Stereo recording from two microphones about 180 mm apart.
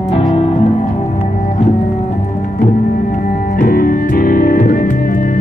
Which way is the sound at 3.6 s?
55° left (ahead or behind).